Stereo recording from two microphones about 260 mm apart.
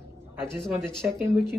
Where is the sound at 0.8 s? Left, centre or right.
Centre.